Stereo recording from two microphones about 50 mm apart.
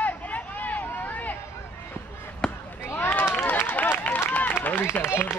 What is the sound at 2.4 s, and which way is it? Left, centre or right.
Basketball bounce, centre.